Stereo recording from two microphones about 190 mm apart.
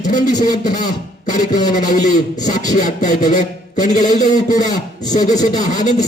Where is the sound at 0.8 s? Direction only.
40° left (ahead or behind).